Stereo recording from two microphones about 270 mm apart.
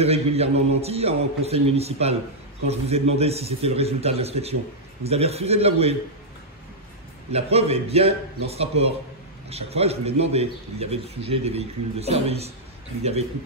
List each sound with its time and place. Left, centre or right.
0.0 s speech: right
7.2 s speech: right